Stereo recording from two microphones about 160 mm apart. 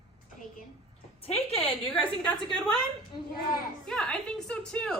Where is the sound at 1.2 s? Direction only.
40° left (ahead or behind).